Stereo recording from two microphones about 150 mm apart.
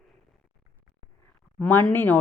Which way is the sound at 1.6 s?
10° left (ahead or behind).